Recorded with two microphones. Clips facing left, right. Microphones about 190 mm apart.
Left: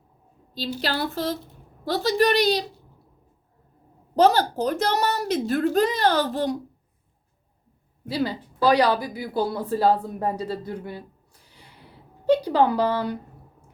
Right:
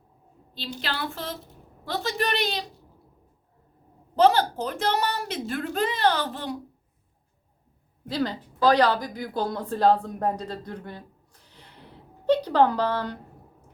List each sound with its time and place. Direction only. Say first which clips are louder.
0.8 s a woman's voice: left 5 dB; 40° left (ahead or behind)
4.1 s a woman's voice: left 1 dB; 40° left (ahead or behind)
8.0 s speech: left 2 dB; 10° left (ahead or behind)